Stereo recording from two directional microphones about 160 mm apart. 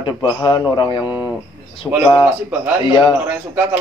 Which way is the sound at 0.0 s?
30° left (ahead or behind).